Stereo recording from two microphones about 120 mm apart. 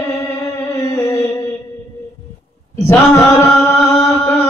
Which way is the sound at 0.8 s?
25° left (ahead or behind).